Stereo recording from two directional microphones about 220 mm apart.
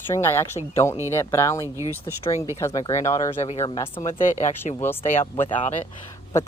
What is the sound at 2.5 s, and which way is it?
Speech, 15° left (ahead or behind).